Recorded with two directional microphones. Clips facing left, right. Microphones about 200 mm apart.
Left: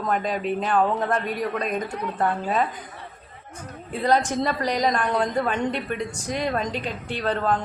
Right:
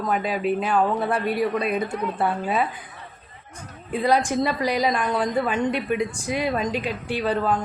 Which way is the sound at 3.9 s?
10° right (ahead or behind).